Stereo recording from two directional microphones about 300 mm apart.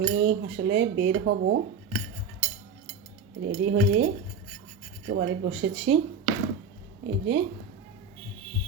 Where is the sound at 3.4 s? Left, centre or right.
Right.